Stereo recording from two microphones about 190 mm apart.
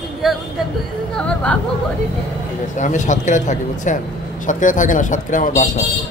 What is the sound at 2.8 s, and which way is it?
Speech, 40° left (ahead or behind).